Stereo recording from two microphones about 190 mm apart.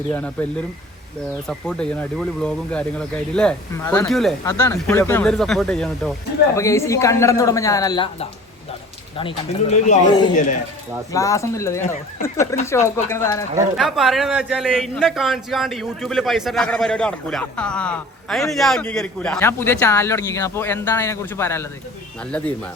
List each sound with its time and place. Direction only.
0.1 s a man's voice: 10° left (ahead or behind)
1.5 s a man's voice: 5° left (ahead or behind)
4.1 s a man's voice: centre (ahead or behind)
4.4 s a man's voice: 15° left (ahead or behind)
6.6 s a man's voice: 15° left (ahead or behind)
13.7 s a man's voice: centre (ahead or behind)